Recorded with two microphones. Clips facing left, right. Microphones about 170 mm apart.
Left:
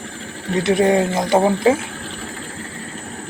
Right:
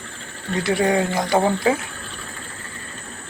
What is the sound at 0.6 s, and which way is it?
Speech, 20° left (ahead or behind).